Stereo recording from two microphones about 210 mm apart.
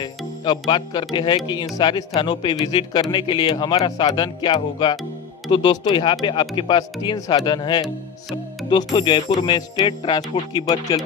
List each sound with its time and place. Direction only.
0.5 s speech: 20° left (ahead or behind)